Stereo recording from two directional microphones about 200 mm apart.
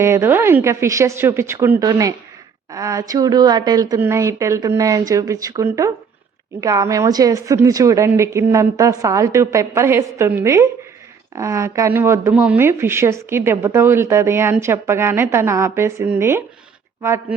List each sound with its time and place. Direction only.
0.0 s speech: 10° right (ahead or behind)